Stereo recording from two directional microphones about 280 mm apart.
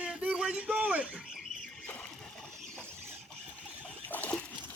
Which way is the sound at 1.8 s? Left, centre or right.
Centre.